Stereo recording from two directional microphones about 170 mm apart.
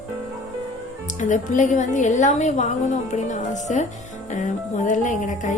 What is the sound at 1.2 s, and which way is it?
Speech, 45° left (ahead or behind).